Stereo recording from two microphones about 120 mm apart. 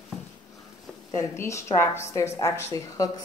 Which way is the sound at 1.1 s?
25° left (ahead or behind).